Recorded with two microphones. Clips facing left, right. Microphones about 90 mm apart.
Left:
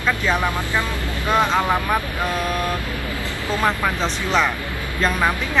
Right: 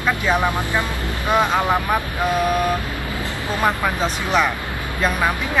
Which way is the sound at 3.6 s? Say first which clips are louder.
Right 1 dB; 15° right (ahead or behind).